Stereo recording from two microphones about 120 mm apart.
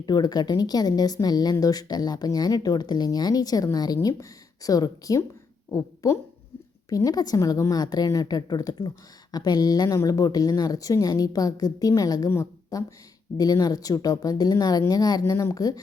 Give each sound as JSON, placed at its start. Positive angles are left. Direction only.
{"t": 0.0, "sound": "a woman's voice", "side_deg": 35}